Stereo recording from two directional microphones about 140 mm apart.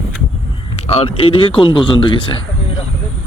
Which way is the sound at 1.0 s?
40° left (ahead or behind).